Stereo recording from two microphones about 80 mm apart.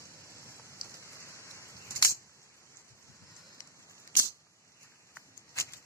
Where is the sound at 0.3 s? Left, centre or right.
Left.